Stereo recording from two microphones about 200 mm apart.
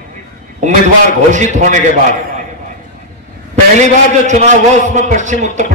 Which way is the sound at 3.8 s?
35° right (ahead or behind).